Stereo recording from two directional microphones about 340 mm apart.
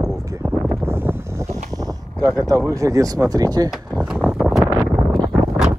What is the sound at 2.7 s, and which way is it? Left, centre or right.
Speech, centre.